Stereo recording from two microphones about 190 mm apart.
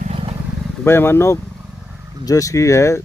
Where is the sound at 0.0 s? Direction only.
30° right (ahead or behind).